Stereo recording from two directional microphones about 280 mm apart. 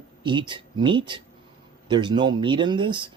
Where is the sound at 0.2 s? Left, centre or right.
Centre.